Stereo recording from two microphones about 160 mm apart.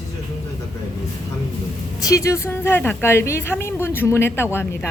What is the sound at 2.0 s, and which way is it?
Speech, 20° left (ahead or behind).